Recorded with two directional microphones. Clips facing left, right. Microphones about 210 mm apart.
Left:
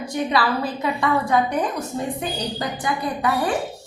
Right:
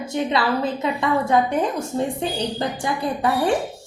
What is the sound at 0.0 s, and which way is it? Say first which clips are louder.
A woman's voice: even; 25° right (ahead or behind).